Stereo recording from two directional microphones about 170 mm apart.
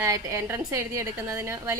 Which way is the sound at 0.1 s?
15° right (ahead or behind).